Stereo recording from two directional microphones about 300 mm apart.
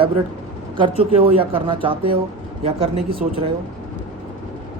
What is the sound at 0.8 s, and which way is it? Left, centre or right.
A man's voice, centre.